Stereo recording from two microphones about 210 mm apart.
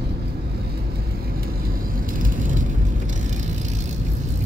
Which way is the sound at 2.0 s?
40° right (ahead or behind).